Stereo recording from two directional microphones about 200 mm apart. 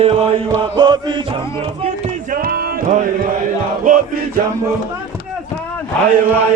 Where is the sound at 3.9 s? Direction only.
40° right (ahead or behind).